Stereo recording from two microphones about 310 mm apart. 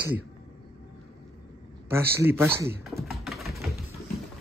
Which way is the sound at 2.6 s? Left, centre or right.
Centre.